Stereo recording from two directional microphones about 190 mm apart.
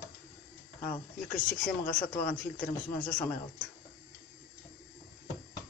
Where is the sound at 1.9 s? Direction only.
5° left (ahead or behind).